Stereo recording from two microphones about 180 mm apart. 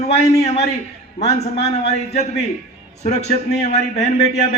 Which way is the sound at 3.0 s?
35° left (ahead or behind).